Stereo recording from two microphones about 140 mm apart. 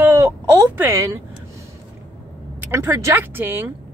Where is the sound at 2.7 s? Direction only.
20° right (ahead or behind).